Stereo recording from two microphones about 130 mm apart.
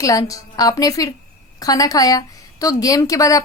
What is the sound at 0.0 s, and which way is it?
A woman's voice, 25° left (ahead or behind).